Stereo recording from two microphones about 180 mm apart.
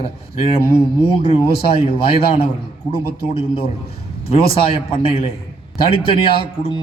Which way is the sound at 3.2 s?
30° left (ahead or behind).